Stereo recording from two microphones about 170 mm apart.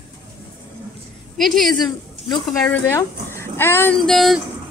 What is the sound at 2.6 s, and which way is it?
Speech, 10° left (ahead or behind).